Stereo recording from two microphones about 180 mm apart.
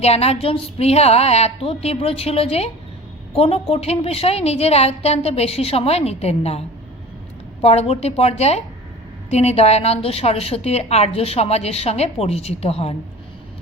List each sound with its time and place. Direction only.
0.0 s a woman's voice: 35° left (ahead or behind)